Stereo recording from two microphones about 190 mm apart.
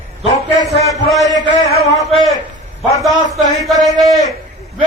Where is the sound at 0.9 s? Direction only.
Centre (ahead or behind).